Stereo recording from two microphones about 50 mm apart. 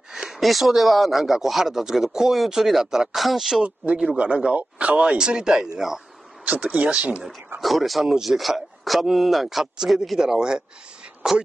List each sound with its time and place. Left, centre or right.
0.1 s speech: centre
3.6 s speech: right
6.4 s speech: right
7.6 s speech: centre